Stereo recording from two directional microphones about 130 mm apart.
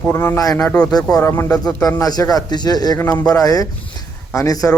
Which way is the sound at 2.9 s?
20° left (ahead or behind).